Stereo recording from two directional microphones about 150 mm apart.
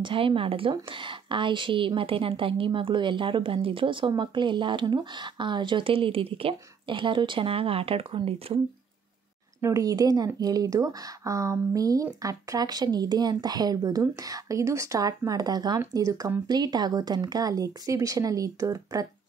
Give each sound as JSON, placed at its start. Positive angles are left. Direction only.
{"t": 0.0, "sound": "speech", "side_deg": -35}
{"t": 9.6, "sound": "a woman's voice", "side_deg": -20}